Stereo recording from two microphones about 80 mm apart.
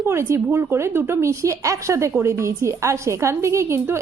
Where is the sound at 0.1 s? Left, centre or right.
Right.